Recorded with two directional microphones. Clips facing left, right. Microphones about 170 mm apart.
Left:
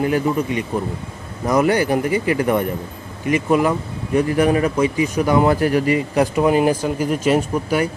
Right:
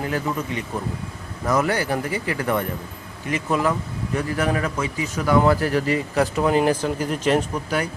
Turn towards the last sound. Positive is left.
turn(degrees=10)  # may be behind; listen again after turning